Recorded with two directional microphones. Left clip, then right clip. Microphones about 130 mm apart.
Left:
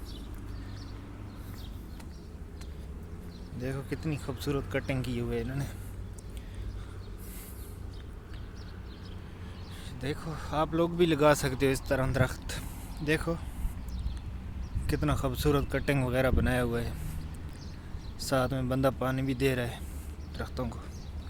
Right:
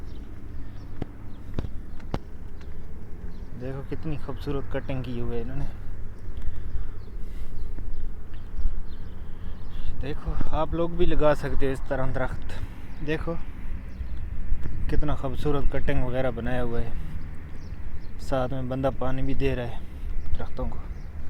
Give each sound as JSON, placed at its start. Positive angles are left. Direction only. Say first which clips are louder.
{"t": 3.6, "sound": "speech", "louder": "right 1 dB", "side_deg": 40}
{"t": 3.8, "sound": "speech", "louder": "right 1 dB", "side_deg": 25}
{"t": 10.0, "sound": "speech", "louder": "right 1 dB", "side_deg": 35}
{"t": 13.1, "sound": "speech", "louder": "even", "side_deg": 35}
{"t": 14.8, "sound": "speech", "louder": "even", "side_deg": 40}
{"t": 18.3, "sound": "speech", "louder": "right 1 dB", "side_deg": 35}